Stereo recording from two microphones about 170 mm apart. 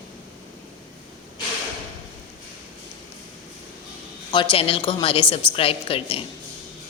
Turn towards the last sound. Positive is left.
turn(degrees=35)  # may be behind; listen again after turning